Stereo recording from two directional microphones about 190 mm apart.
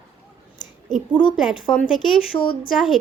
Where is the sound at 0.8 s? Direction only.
Centre (ahead or behind).